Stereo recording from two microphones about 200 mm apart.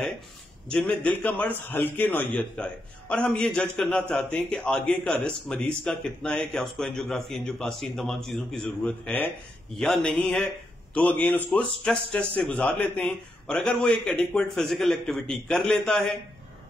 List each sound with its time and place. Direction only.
0.7 s a man's voice: 5° left (ahead or behind)